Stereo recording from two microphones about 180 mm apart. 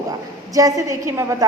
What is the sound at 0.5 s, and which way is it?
Speech, 20° right (ahead or behind).